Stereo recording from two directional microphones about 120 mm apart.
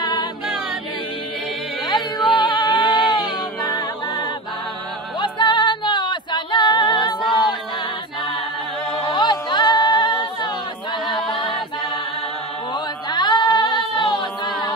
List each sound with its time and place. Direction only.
0.0 s music: 35° left (ahead or behind)
1.9 s music: 35° left (ahead or behind)
2.4 s a sound: 40° left (ahead or behind)
3.6 s music: 35° left (ahead or behind)
9.1 s music: 40° left (ahead or behind)
12.7 s chant: 35° left (ahead or behind)